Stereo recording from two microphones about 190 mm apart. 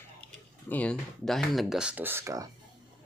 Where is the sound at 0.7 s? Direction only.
5° left (ahead or behind); by 2.4 s 15° right (ahead or behind).